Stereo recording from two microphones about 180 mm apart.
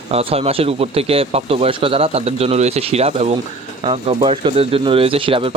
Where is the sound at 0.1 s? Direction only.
35° right (ahead or behind).